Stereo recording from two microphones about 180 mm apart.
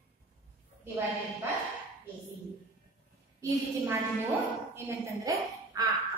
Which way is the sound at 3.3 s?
15° right (ahead or behind).